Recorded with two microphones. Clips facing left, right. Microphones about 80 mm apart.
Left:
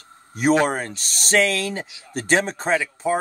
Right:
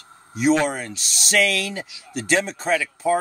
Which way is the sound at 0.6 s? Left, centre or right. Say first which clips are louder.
Left 2 dB; left.